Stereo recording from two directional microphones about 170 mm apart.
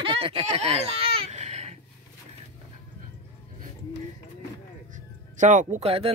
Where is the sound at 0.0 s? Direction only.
30° right (ahead or behind).